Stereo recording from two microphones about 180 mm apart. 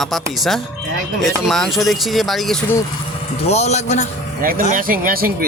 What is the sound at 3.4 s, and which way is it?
Speech, 35° left (ahead or behind).